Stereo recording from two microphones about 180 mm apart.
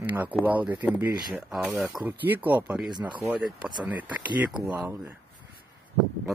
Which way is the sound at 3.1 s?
5° right (ahead or behind).